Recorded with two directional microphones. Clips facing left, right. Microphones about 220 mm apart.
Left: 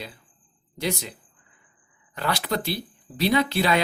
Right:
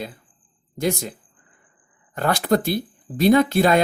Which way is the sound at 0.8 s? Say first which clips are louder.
Right 5 dB; 50° right (ahead or behind).